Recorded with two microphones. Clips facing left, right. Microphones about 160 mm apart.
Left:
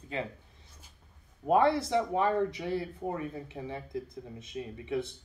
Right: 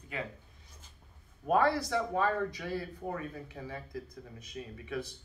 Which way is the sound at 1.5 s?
20° left (ahead or behind).